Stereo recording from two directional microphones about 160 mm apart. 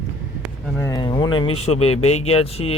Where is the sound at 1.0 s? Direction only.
30° left (ahead or behind).